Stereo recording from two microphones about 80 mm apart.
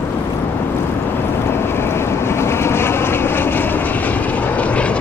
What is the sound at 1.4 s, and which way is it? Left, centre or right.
Vehicle, left.